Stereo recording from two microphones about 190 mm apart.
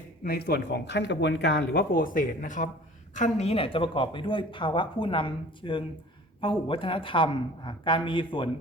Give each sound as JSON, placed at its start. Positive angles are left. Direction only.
{"t": 0.3, "sound": "speech", "side_deg": 55}